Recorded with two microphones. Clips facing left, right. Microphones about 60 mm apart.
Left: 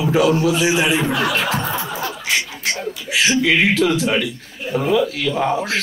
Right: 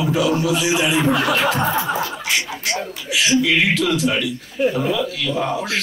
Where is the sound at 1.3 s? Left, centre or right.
Right.